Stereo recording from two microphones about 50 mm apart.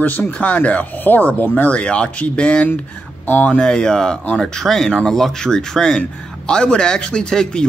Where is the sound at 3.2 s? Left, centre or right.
Left.